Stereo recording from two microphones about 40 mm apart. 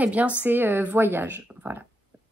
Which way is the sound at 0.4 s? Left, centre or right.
Right.